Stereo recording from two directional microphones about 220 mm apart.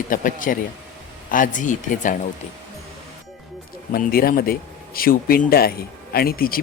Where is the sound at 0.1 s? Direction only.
35° left (ahead or behind).